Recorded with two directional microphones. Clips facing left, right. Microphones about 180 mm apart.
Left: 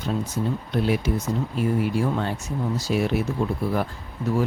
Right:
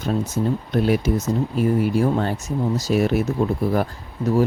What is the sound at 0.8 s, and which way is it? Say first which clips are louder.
Speech: right 4 dB; 45° right (ahead or behind).